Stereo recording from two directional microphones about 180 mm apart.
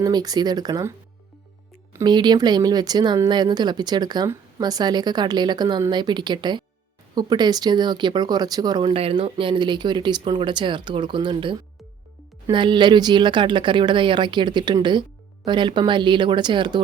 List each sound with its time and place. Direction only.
0.0 s speech: 20° right (ahead or behind)